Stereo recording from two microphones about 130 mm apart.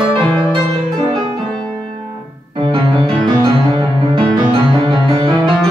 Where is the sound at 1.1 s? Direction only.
40° right (ahead or behind).